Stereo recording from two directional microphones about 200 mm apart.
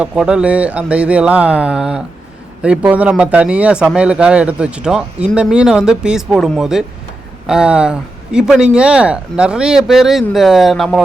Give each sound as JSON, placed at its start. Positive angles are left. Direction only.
{"t": 0.0, "sound": "speech", "side_deg": -5}